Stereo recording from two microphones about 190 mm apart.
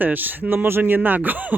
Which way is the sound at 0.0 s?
10° right (ahead or behind).